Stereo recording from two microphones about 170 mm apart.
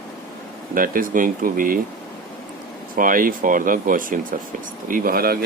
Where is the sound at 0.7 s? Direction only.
55° right (ahead or behind).